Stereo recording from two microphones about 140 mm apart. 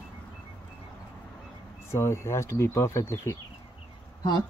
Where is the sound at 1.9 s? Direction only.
20° left (ahead or behind).